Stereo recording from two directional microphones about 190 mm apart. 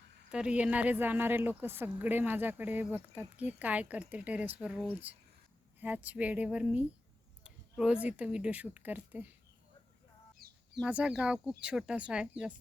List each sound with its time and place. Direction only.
0.3 s a woman's voice: 5° right (ahead or behind)
7.4 s a sound: 5° right (ahead or behind)
8.0 s a woman's voice: 5° right (ahead or behind)
10.4 s bird: 50° right (ahead or behind)
10.8 s speech: 5° right (ahead or behind)